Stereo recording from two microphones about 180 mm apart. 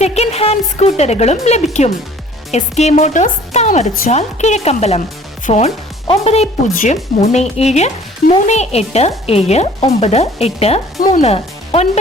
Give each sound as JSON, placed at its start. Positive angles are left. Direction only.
{"t": 0.0, "sound": "speech", "side_deg": 35}